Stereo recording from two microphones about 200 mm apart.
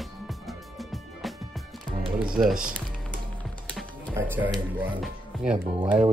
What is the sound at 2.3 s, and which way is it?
Speech, 5° right (ahead or behind).